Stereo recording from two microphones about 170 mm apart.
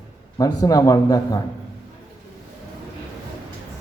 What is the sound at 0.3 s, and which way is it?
A man's voice, 20° left (ahead or behind).